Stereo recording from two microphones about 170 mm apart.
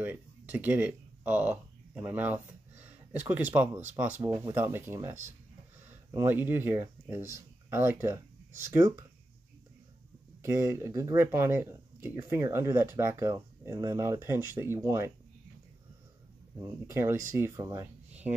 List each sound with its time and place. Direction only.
0.0 s speech: 10° right (ahead or behind)
10.4 s speech: 15° right (ahead or behind)
16.8 s speech: 15° right (ahead or behind)